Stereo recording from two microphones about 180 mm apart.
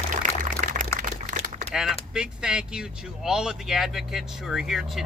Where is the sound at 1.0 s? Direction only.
45° right (ahead or behind).